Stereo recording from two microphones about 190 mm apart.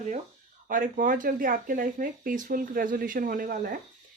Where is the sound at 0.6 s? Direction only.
45° right (ahead or behind).